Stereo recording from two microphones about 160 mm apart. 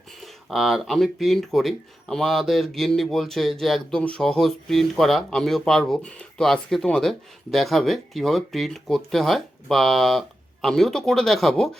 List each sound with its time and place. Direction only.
0.2 s speech: centre (ahead or behind)